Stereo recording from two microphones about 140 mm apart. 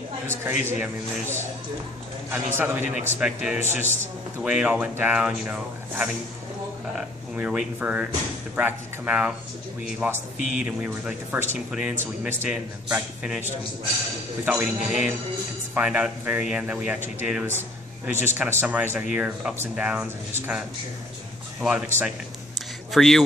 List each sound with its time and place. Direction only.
0.7 s a man's voice: 15° right (ahead or behind); by 23.2 s centre (ahead or behind)